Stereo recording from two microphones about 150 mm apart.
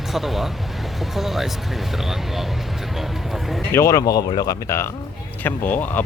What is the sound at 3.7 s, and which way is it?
Speech, 20° left (ahead or behind).